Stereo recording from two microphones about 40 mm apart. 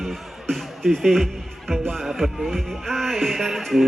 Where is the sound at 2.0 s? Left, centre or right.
Centre.